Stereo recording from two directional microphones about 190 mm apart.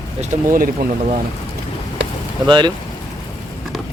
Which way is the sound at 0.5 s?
50° right (ahead or behind).